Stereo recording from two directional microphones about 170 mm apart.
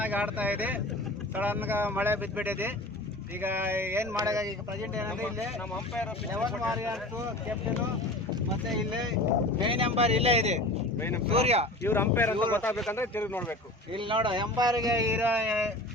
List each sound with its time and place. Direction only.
0.0 s speech: 10° right (ahead or behind)
6.4 s speech: centre (ahead or behind)
9.6 s speech: 30° right (ahead or behind)
11.8 s speech: 15° left (ahead or behind)
13.9 s speech: 30° right (ahead or behind); by 15.6 s 10° right (ahead or behind)